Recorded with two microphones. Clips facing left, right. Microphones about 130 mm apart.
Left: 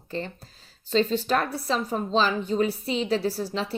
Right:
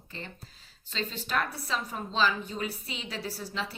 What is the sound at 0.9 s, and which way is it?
A woman's voice, 35° left (ahead or behind).